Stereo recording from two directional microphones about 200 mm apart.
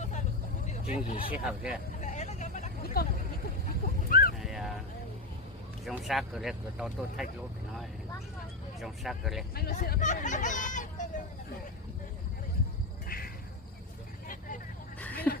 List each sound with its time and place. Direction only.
1.0 s speech: 40° left (ahead or behind)
1.3 s speech: 5° right (ahead or behind)
2.0 s vehicle: 35° left (ahead or behind)
3.0 s speech: 50° left (ahead or behind)
3.8 s sheep: 45° left (ahead or behind)
4.4 s clip-clop: centre (ahead or behind)
5.8 s speech: centre (ahead or behind)
8.8 s speech: centre (ahead or behind)
9.6 s speech: 50° left (ahead or behind)
13.1 s a sound: 45° left (ahead or behind)
14.9 s a sound: 10° left (ahead or behind)